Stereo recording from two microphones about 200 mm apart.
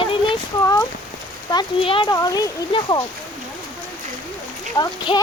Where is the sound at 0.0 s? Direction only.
25° left (ahead or behind).